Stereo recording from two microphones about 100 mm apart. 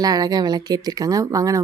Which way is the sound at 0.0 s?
40° right (ahead or behind).